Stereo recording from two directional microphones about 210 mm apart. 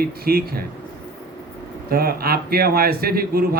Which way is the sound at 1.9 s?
45° right (ahead or behind).